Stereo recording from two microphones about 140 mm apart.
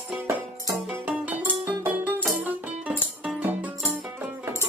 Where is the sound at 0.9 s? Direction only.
10° right (ahead or behind).